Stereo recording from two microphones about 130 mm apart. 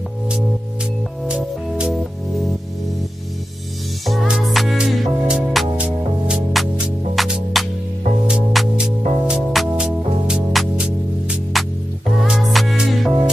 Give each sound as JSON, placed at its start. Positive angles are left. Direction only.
{"t": 1.2, "sound": "music", "side_deg": -5}
{"t": 4.0, "sound": "music", "side_deg": 0}